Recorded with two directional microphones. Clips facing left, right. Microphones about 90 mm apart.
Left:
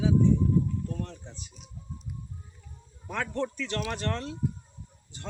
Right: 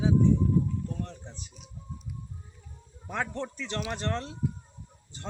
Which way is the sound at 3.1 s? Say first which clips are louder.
Left 2 dB; 25° right (ahead or behind).